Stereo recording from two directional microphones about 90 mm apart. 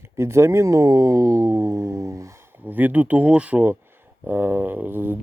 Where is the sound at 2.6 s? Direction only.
20° right (ahead or behind).